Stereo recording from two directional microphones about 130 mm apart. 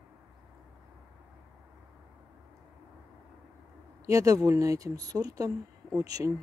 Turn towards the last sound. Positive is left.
turn(degrees=-25)  # may be behind; listen again after turning